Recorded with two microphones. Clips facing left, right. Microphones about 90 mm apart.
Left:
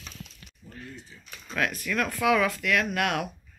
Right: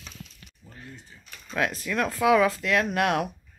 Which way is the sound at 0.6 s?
20° right (ahead or behind).